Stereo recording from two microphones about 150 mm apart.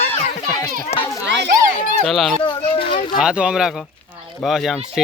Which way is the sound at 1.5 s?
60° right (ahead or behind).